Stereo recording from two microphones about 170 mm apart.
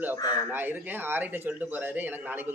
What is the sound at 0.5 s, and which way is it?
Speech, 10° right (ahead or behind).